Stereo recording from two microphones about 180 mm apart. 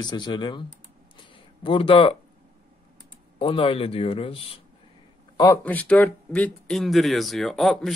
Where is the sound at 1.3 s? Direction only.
30° left (ahead or behind).